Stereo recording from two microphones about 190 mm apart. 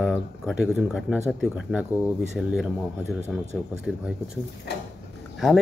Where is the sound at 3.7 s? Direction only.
5° right (ahead or behind).